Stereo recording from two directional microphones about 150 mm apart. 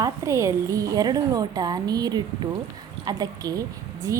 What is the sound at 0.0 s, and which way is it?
A woman's voice, 20° right (ahead or behind).